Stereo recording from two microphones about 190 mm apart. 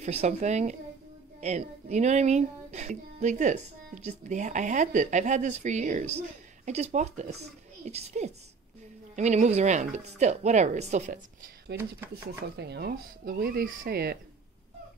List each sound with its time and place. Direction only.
0.0 s speech: 35° right (ahead or behind)
11.7 s speech: 60° right (ahead or behind)